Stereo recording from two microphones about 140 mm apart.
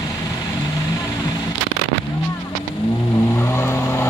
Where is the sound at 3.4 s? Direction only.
20° left (ahead or behind).